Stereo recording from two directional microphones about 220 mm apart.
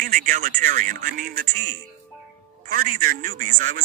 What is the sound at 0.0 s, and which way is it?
Speech, 40° right (ahead or behind).